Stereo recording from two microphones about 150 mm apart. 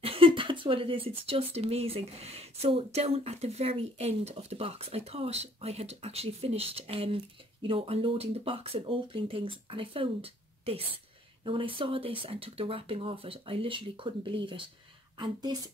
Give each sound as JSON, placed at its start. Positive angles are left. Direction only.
{"t": 0.0, "sound": "speech", "side_deg": -35}